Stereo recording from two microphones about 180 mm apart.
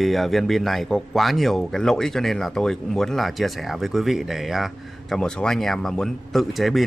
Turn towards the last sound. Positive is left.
turn(degrees=0)  # may be behind; listen again after turning